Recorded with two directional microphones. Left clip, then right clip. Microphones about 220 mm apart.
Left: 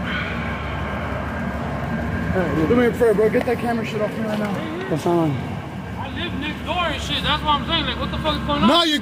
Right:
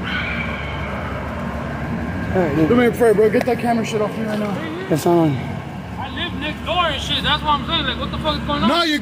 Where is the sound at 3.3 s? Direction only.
45° right (ahead or behind).